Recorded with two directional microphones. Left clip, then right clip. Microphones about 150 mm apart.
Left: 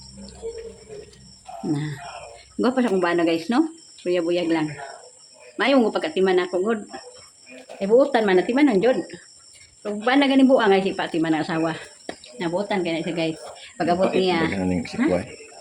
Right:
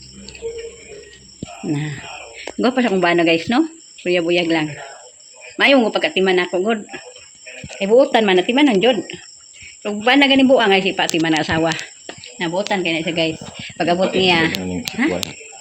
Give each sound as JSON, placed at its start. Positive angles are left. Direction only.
{"t": 1.7, "sound": "speech", "side_deg": -15}
{"t": 12.4, "sound": "speech", "side_deg": -60}
{"t": 13.1, "sound": "speech", "side_deg": -30}
{"t": 14.2, "sound": "speech", "side_deg": -40}
{"t": 15.0, "sound": "speech", "side_deg": -60}